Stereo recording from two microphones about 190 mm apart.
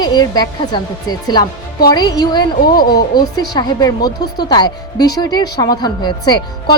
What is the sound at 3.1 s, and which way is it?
Speech, 20° left (ahead or behind).